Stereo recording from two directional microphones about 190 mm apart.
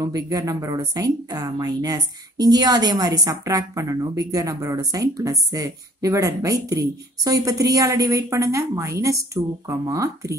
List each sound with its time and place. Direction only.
0.0 s a woman's voice: 20° right (ahead or behind)